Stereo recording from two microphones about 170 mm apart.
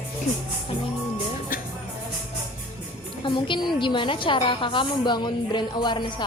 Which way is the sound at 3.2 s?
30° left (ahead or behind).